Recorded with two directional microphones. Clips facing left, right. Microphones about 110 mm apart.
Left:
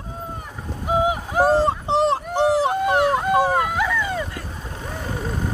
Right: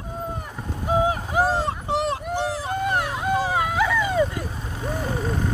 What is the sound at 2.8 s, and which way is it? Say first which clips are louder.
Wail: left 5 dB; 5° left (ahead or behind).